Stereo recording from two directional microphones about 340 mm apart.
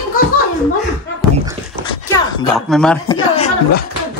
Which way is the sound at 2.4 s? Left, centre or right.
Centre.